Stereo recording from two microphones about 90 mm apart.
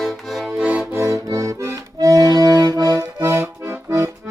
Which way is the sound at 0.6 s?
15° right (ahead or behind).